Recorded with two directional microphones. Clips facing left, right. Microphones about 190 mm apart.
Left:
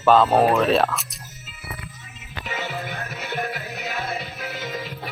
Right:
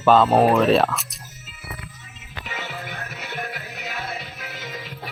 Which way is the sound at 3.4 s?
40° left (ahead or behind).